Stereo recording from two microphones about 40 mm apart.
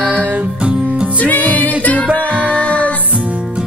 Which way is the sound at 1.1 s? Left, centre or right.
Left.